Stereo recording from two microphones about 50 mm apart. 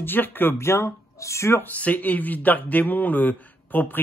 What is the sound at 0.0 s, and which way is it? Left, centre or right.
Speech, left.